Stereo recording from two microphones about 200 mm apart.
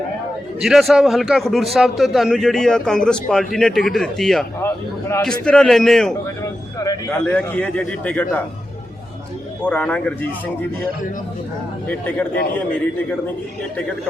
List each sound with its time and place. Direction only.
0.6 s a man's voice: centre (ahead or behind)
6.7 s a sound: 20° left (ahead or behind)
7.3 s a man's voice: 5° left (ahead or behind)
9.6 s a man's voice: 10° left (ahead or behind)
11.9 s a man's voice: 10° left (ahead or behind)